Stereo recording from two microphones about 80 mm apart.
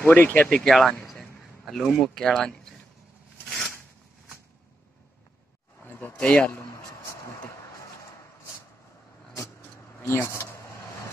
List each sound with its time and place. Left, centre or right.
0.0 s speech: left
0.5 s speech: centre
5.9 s a sound: left
10.0 s speech: left